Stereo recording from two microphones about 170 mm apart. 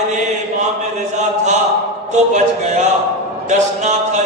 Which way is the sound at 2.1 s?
45° right (ahead or behind).